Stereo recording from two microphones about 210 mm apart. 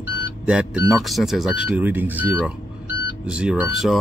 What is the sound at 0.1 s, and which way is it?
Speech, 5° right (ahead or behind).